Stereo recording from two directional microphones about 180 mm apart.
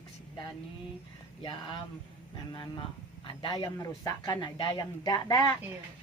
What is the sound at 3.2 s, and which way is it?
Speech, 25° left (ahead or behind).